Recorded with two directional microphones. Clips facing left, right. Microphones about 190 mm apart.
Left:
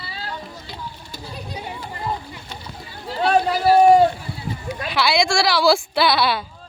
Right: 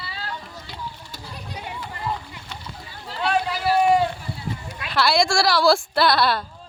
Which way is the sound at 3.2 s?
40° left (ahead or behind).